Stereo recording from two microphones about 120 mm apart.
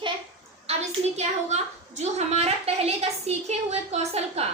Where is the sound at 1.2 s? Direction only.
70° right (ahead or behind).